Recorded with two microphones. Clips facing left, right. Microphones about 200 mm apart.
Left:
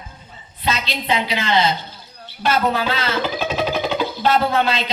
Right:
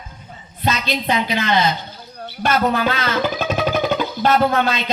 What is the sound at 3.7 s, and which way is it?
Music, 50° right (ahead or behind).